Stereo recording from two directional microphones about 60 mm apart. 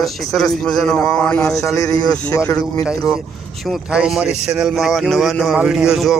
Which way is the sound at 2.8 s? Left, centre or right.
Centre.